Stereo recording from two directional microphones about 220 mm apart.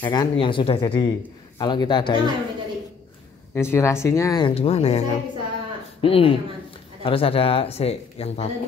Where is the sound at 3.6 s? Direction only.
10° left (ahead or behind); by 8.5 s 30° left (ahead or behind).